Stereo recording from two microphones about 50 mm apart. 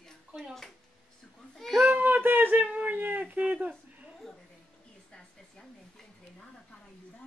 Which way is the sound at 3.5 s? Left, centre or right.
Right.